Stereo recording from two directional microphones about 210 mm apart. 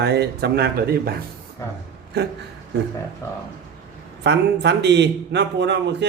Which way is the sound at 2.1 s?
50° right (ahead or behind).